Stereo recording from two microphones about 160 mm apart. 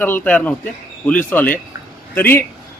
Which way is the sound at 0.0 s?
10° left (ahead or behind).